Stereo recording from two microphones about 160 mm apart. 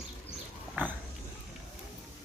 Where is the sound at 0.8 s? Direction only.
10° right (ahead or behind).